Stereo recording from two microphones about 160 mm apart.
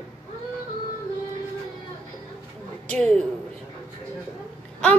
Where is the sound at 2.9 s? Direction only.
5° left (ahead or behind).